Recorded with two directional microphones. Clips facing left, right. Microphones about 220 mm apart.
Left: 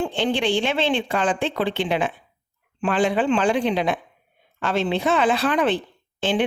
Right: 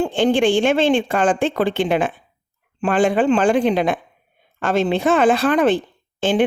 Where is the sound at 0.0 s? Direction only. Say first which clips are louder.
Right 6 dB; 45° right (ahead or behind).